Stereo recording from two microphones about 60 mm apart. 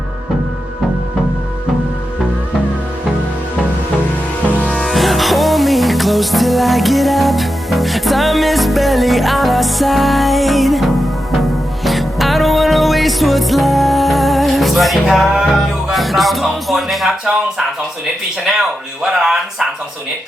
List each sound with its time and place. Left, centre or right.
4.5 s music: left
4.8 s music: centre
19.0 s speech: centre